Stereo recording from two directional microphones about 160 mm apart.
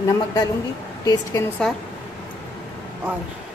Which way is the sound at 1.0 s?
25° left (ahead or behind).